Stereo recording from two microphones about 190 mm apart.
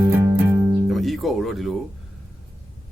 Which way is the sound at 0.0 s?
15° right (ahead or behind).